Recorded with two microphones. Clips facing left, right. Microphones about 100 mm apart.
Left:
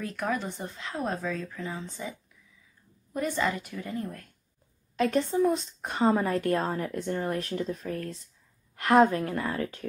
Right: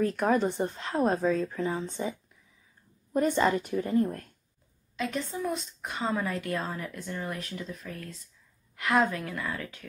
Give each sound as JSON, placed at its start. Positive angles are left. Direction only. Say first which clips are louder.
{"t": 0.0, "sound": "speech", "louder": "right 6 dB", "side_deg": -35}
{"t": 4.9, "sound": "a woman's voice", "louder": "left 7 dB", "side_deg": 45}